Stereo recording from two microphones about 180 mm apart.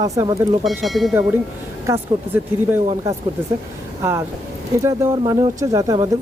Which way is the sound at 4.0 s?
15° right (ahead or behind).